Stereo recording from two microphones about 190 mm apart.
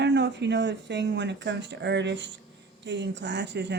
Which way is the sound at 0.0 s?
65° right (ahead or behind).